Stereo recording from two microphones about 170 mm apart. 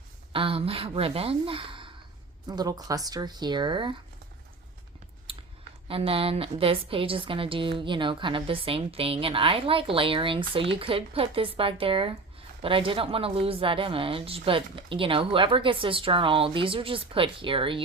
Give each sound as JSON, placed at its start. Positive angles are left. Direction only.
{"t": 0.3, "sound": "a woman's voice", "side_deg": -30}
{"t": 5.2, "sound": "a sound", "side_deg": -30}
{"t": 5.9, "sound": "a woman's voice", "side_deg": -35}